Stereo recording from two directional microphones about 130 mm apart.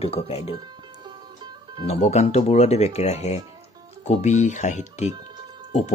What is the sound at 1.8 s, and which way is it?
Speech, 55° left (ahead or behind).